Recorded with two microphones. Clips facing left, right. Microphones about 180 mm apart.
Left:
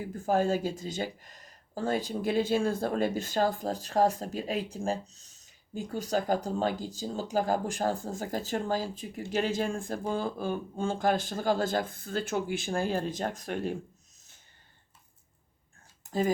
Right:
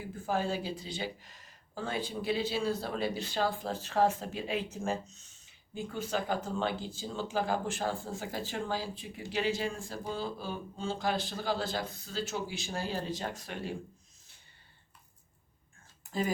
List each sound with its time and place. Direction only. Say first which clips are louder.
0.0 s speech: left 6 dB; 45° left (ahead or behind)